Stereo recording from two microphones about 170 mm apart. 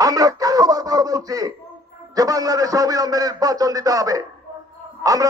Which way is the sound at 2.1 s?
20° right (ahead or behind).